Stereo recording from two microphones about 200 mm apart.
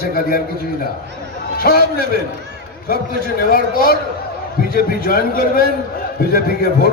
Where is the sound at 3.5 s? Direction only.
45° left (ahead or behind).